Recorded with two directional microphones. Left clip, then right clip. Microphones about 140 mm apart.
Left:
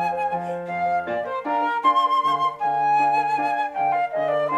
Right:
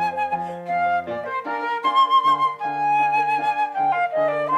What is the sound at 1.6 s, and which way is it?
Flute, 15° right (ahead or behind).